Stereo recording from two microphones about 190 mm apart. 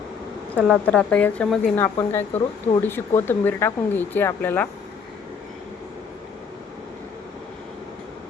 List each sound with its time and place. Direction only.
0.5 s a woman's voice: 5° left (ahead or behind)